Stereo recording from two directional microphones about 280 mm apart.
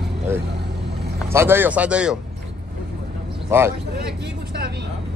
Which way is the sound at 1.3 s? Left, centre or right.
Centre.